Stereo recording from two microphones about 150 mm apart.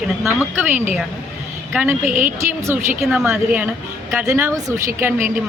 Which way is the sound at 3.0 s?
5° right (ahead or behind).